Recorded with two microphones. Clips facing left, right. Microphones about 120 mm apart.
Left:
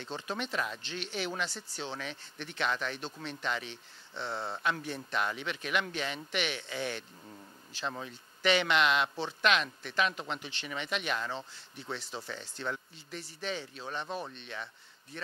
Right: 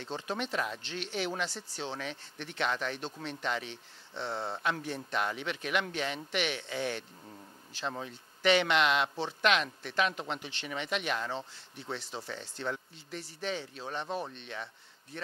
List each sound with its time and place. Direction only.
0.0 s speech: 35° right (ahead or behind)
0.8 s speech: 50° right (ahead or behind)
1.3 s speech: 35° right (ahead or behind)
8.5 s speech: 50° right (ahead or behind)
10.1 s speech: 35° right (ahead or behind)
11.1 s speech: 30° right (ahead or behind)